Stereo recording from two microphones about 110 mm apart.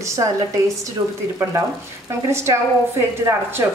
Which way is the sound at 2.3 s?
25° right (ahead or behind).